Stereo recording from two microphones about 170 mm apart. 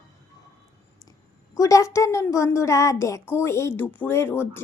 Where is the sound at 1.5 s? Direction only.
20° left (ahead or behind).